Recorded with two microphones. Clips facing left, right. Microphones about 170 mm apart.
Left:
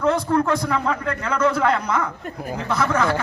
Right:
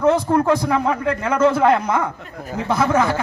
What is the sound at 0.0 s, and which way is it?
A man's voice, 25° right (ahead or behind).